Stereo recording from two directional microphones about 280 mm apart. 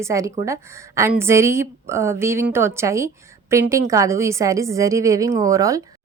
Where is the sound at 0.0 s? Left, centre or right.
Centre.